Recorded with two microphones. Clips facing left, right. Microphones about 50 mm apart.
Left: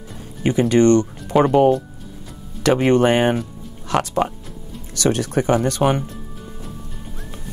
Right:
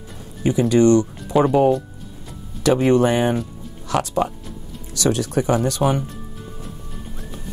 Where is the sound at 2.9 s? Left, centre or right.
Left.